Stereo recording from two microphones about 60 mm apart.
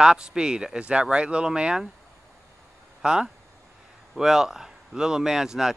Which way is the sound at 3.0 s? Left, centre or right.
Centre.